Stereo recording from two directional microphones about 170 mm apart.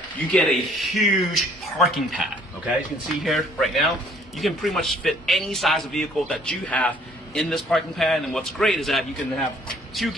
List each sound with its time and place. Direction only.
0.3 s a man's voice: 5° left (ahead or behind)